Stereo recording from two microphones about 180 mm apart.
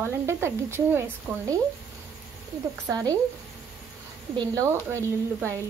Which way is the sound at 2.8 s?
20° right (ahead or behind).